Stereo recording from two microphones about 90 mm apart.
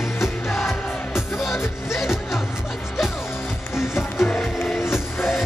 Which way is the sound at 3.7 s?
25° left (ahead or behind).